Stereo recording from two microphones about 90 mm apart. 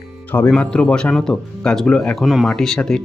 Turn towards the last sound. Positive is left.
turn(degrees=5)  # may be behind; listen again after turning